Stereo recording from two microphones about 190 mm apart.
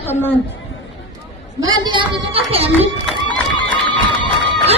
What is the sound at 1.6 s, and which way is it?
A child's voice, 20° right (ahead or behind).